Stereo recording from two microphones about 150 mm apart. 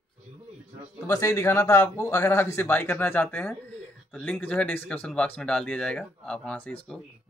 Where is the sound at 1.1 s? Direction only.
20° left (ahead or behind).